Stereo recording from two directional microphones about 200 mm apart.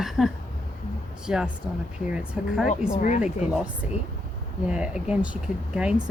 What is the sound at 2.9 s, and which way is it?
Speech, 40° left (ahead or behind).